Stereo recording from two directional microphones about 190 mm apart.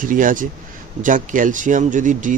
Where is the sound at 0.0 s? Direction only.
45° right (ahead or behind).